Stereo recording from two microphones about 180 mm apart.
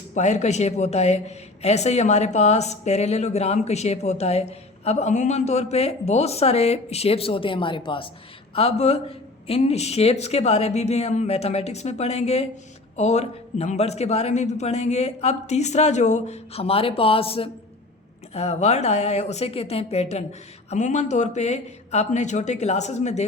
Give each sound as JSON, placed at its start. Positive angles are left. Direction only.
{"t": 0.1, "sound": "speech", "side_deg": 40}